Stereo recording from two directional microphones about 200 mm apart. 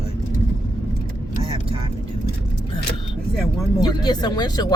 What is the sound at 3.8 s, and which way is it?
Speech, 20° left (ahead or behind).